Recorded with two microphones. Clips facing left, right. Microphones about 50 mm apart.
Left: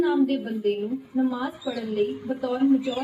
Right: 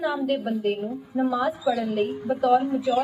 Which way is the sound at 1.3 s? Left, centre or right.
Right.